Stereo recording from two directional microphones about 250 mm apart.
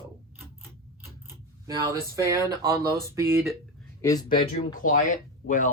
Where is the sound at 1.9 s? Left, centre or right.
Centre.